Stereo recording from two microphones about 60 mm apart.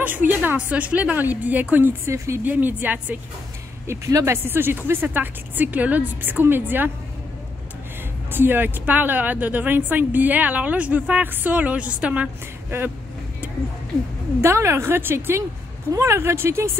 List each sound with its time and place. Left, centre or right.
0.0 s a woman's voice: right
2.0 s a woman's voice: right
2.4 s a woman's voice: right
3.8 s speech: right
4.3 s a woman's voice: right
8.3 s a woman's voice: right
14.4 s a woman's voice: right